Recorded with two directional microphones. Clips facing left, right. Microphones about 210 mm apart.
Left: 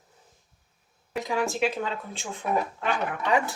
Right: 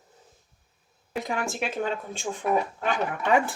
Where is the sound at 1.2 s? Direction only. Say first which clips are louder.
Left 5 dB; 50° right (ahead or behind).